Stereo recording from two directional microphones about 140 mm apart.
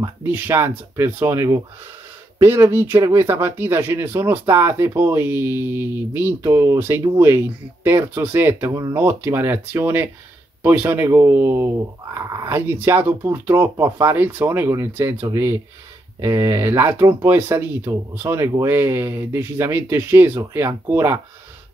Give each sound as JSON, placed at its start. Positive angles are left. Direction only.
{"t": 0.2, "sound": "speech", "side_deg": -15}